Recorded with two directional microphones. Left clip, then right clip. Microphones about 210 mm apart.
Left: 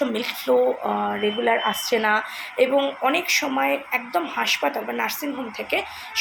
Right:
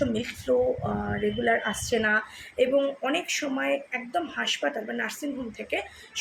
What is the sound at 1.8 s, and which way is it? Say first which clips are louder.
A woman's voice: left 4 dB; 10° right (ahead or behind).